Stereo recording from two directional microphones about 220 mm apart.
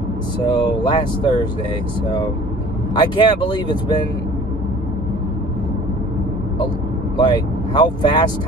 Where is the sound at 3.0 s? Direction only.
20° left (ahead or behind).